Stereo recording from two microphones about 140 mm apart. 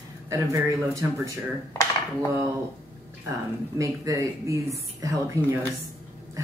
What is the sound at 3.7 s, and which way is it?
Speech, 25° right (ahead or behind).